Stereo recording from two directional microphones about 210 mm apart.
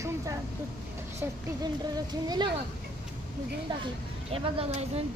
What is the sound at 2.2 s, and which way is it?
Speech, 20° right (ahead or behind).